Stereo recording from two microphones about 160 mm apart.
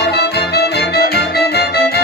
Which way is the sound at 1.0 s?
85° left.